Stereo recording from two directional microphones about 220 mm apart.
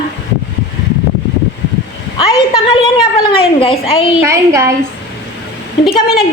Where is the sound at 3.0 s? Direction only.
25° left (ahead or behind).